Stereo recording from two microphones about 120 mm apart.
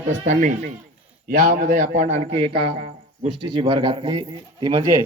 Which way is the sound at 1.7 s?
90° right.